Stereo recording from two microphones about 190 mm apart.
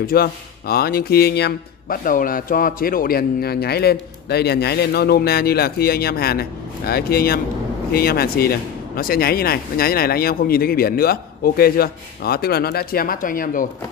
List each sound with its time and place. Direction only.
0.0 s speech: 50° left (ahead or behind)